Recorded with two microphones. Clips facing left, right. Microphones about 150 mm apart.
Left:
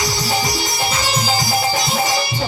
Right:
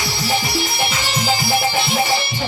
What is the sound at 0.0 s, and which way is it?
Music, 40° left (ahead or behind).